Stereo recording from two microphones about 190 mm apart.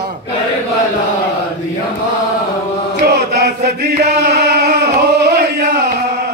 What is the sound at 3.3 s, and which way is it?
Chant, 55° right (ahead or behind).